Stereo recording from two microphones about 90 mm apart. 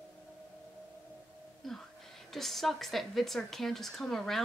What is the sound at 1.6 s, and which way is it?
A woman's voice, 5° left (ahead or behind).